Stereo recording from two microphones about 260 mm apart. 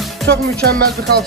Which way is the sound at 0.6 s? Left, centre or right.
Right.